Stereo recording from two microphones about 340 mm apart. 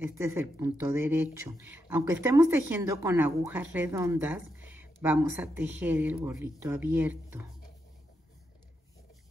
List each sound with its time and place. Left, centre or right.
0.0 s speech: centre